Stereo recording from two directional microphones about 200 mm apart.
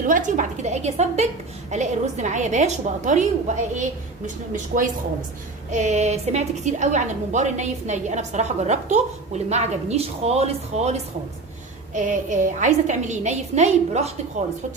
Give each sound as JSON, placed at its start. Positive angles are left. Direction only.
{"t": 0.0, "sound": "a woman's voice", "side_deg": -40}
{"t": 4.5, "sound": "a woman's voice", "side_deg": -40}